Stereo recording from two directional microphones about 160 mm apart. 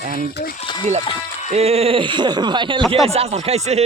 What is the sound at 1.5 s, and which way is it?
Speech, 40° right (ahead or behind).